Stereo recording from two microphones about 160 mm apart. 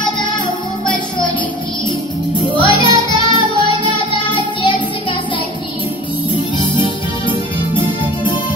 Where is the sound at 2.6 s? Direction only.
30° left (ahead or behind).